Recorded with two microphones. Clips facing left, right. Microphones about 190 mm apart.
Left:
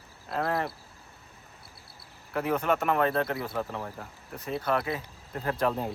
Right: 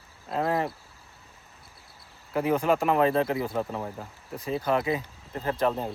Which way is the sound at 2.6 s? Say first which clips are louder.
Right 3 dB; 30° right (ahead or behind).